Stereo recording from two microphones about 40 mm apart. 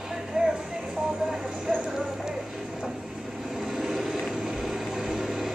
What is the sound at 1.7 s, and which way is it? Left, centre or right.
Clip-clop, centre.